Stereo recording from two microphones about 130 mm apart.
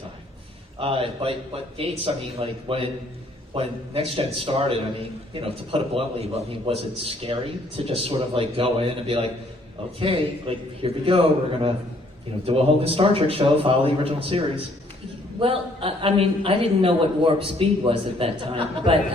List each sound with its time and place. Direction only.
0.8 s a man's voice: 45° right (ahead or behind)